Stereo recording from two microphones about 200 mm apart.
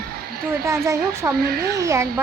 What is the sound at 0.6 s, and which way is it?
Speech, 15° right (ahead or behind).